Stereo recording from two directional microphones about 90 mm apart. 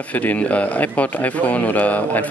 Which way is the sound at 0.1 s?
20° left (ahead or behind).